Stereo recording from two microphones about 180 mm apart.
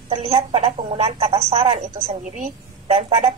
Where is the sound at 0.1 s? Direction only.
35° right (ahead or behind).